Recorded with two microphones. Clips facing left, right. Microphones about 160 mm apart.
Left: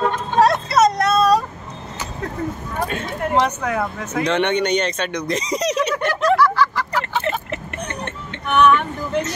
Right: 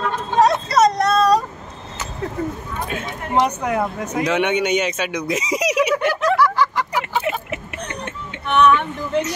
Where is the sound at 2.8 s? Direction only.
5° right (ahead or behind).